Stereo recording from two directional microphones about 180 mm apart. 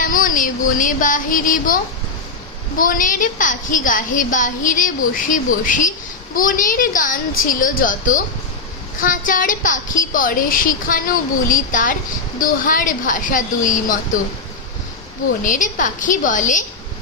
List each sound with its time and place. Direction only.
0.0 s a woman's voice: 50° left (ahead or behind)
15.4 s a woman's voice: 45° left (ahead or behind)